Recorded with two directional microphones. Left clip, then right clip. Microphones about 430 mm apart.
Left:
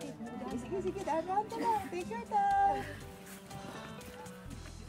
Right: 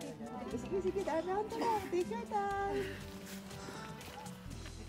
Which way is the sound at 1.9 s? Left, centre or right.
Centre.